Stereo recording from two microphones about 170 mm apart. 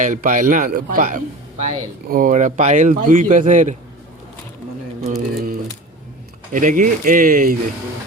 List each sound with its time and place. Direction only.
0.0 s speech: 50° right (ahead or behind)
5.0 s a sound: 55° right (ahead or behind)
6.5 s speech: 50° right (ahead or behind)